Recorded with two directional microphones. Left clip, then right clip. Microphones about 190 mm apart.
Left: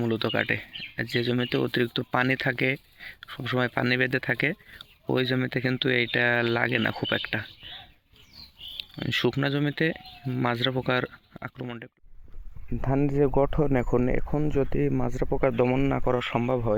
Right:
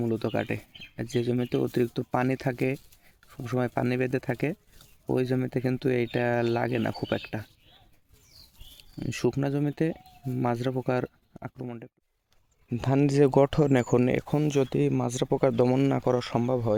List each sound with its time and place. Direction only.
0.0 s speech: centre (ahead or behind)
9.0 s speech: 5° right (ahead or behind)
12.7 s speech: 20° right (ahead or behind)
13.0 s speech: 35° right (ahead or behind)
13.8 s speech: 20° right (ahead or behind)
14.5 s speech: 10° right (ahead or behind)
15.3 s speech: 25° right (ahead or behind)